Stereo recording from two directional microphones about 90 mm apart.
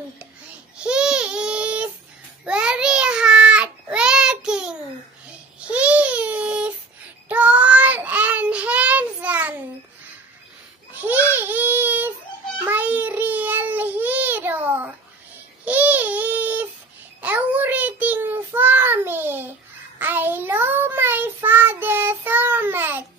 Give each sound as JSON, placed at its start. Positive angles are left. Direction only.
{"t": 0.7, "sound": "babbling", "side_deg": -10}
{"t": 2.4, "sound": "child singing", "side_deg": -10}
{"t": 5.7, "sound": "baby cry", "side_deg": -15}
{"t": 7.2, "sound": "child singing", "side_deg": -15}
{"t": 10.9, "sound": "a sound", "side_deg": -20}
{"t": 12.6, "sound": "child singing", "side_deg": -20}
{"t": 15.6, "sound": "babbling", "side_deg": -15}
{"t": 17.2, "sound": "child singing", "side_deg": -15}